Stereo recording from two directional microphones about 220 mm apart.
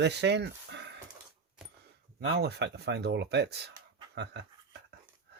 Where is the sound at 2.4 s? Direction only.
50° right (ahead or behind).